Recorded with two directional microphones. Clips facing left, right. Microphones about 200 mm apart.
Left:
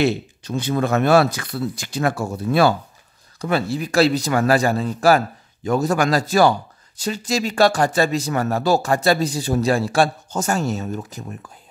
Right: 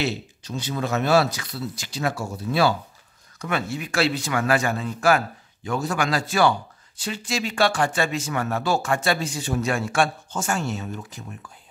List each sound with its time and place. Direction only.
0.0 s speech: 55° left (ahead or behind)
3.3 s speech: 35° left (ahead or behind)